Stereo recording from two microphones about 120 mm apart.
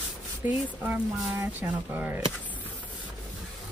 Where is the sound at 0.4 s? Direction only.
20° right (ahead or behind).